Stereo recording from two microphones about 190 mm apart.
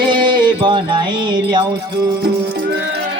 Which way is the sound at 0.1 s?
25° right (ahead or behind).